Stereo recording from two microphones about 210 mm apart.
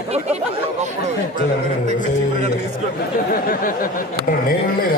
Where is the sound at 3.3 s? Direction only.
40° left (ahead or behind).